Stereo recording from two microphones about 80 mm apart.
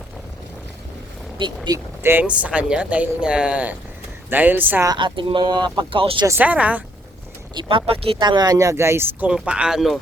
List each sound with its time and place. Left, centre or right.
1.4 s speech: right
2.0 s speech: right
2.2 s speech: centre
4.9 s speech: right
6.4 s speech: centre
7.5 s speech: right
9.5 s speech: centre